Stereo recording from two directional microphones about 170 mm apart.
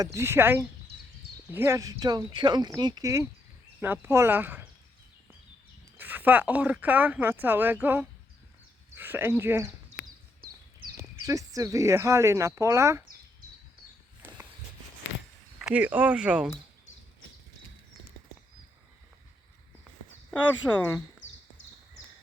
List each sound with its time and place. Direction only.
0.0 s speech: 15° right (ahead or behind)
6.0 s speech: 10° right (ahead or behind)
10.9 s speech: 20° right (ahead or behind)
14.2 s walk: 10° right (ahead or behind)
15.5 s speech: 5° right (ahead or behind)
20.6 s speech: centre (ahead or behind)